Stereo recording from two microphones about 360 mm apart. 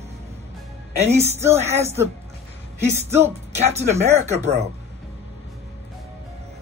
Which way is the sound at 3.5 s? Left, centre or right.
Centre.